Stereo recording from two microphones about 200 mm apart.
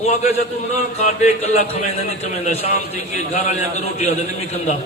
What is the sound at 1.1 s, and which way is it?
Speech, 35° left (ahead or behind).